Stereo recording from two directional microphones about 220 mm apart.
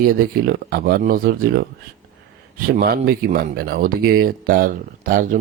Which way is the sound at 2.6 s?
40° right (ahead or behind).